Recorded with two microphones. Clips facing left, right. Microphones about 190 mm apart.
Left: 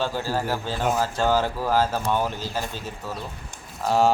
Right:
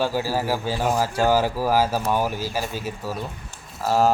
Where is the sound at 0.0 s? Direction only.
10° right (ahead or behind).